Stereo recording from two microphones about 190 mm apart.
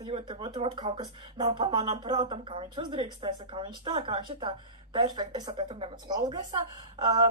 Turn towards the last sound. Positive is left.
turn(degrees=-20)  # may be behind; listen again after turning